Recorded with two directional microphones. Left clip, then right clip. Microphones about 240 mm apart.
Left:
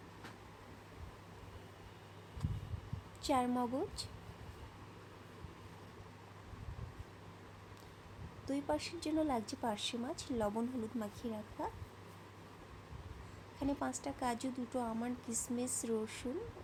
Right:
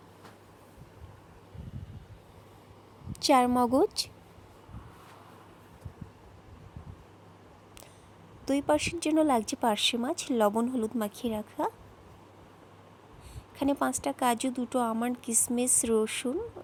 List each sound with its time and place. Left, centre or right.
3.2 s speech: right
8.4 s speech: right
13.6 s speech: right